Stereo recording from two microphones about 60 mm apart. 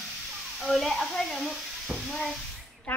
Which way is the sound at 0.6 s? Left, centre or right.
Centre.